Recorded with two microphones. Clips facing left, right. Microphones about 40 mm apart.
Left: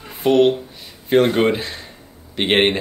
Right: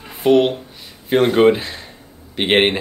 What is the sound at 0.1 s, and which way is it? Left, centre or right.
Speech, centre.